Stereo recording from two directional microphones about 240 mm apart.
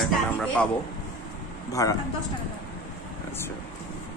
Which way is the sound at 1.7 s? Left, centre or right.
Centre.